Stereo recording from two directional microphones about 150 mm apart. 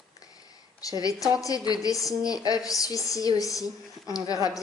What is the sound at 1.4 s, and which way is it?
A woman's voice, 25° left (ahead or behind).